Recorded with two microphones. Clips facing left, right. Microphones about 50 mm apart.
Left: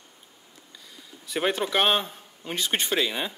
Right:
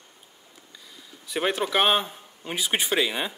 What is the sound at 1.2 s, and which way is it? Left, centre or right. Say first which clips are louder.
Speech: even; centre.